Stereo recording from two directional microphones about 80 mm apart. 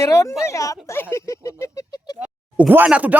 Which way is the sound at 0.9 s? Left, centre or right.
Left.